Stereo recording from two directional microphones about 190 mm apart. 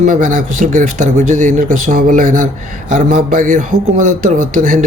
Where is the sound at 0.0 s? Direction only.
40° right (ahead or behind).